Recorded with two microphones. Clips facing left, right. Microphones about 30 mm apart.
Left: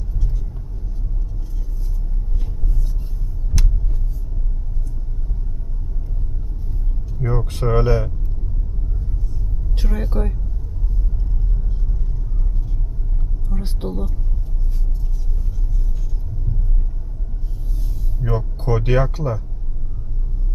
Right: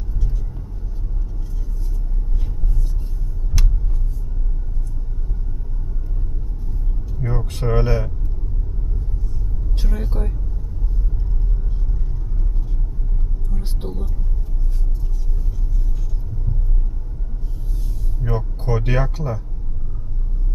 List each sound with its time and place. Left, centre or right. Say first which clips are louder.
3.6 s vehicle: left 1 dB; centre
7.2 s vehicle: left 3 dB; centre
9.7 s speech: left 4 dB; centre
13.5 s a sound: left 5 dB; centre
13.8 s speech: left 5 dB; centre
18.2 s a sound: left 1 dB; centre
18.8 s speech: left 3 dB; centre